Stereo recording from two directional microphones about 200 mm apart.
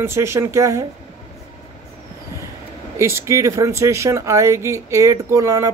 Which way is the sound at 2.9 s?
15° right (ahead or behind).